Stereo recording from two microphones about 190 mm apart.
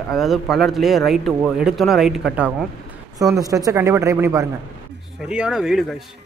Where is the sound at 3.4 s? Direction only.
20° right (ahead or behind).